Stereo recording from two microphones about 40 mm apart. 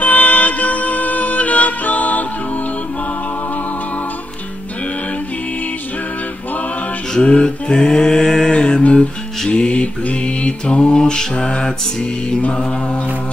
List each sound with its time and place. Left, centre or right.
0.0 s music: left
7.2 s music: left
8.8 s music: left
9.5 s mantra: left